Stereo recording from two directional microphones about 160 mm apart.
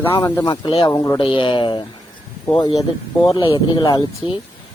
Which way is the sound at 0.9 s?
20° left (ahead or behind).